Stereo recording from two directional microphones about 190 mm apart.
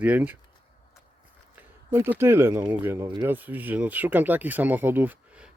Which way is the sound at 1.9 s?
10° right (ahead or behind).